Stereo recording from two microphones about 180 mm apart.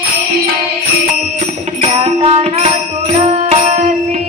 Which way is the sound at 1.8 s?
35° right (ahead or behind).